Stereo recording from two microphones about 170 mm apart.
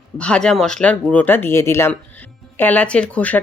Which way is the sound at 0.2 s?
5° left (ahead or behind).